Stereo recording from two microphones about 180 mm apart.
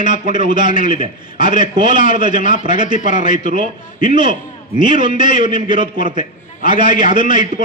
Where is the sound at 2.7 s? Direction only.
25° right (ahead or behind).